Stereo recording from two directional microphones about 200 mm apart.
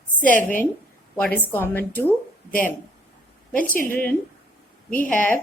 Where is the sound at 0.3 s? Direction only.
40° left (ahead or behind).